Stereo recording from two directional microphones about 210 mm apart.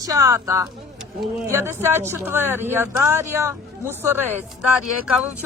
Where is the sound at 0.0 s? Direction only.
15° right (ahead or behind).